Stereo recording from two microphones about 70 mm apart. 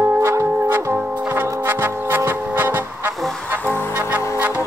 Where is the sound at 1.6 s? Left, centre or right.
Right.